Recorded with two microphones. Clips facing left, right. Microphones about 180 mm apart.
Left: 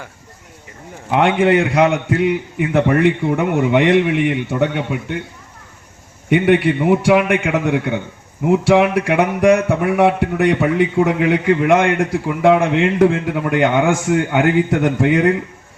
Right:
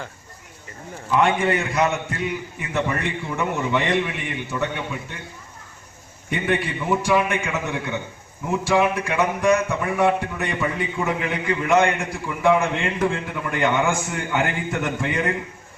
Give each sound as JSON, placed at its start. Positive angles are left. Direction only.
{"t": 1.1, "sound": "a man's voice", "side_deg": 65}
{"t": 6.3, "sound": "speech", "side_deg": 70}